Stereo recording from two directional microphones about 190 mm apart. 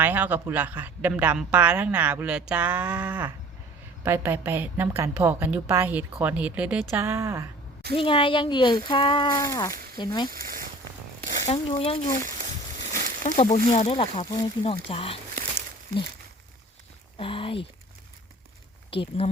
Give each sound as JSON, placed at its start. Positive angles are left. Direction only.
{"t": 0.0, "sound": "a woman's voice", "side_deg": -10}
{"t": 7.9, "sound": "speech", "side_deg": 25}
{"t": 10.2, "sound": "speech", "side_deg": -50}
{"t": 11.4, "sound": "speech", "side_deg": 30}
{"t": 12.2, "sound": "a sound", "side_deg": -40}
{"t": 13.2, "sound": "speech", "side_deg": 35}
{"t": 17.2, "sound": "speech", "side_deg": 30}
{"t": 18.9, "sound": "speech", "side_deg": 30}